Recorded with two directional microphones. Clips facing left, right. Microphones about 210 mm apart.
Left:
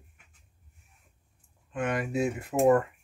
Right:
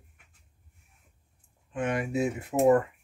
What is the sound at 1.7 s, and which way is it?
Speech, 25° right (ahead or behind).